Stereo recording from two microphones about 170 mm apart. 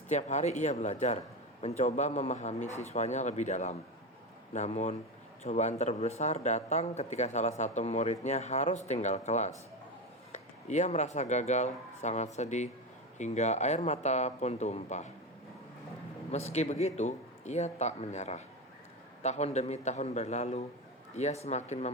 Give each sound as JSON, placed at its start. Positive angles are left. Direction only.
{"t": 0.1, "sound": "a man's voice", "side_deg": 45}
{"t": 16.3, "sound": "a man's voice", "side_deg": 40}